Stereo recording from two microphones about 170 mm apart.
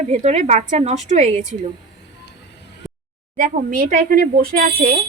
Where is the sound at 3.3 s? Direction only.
55° right (ahead or behind).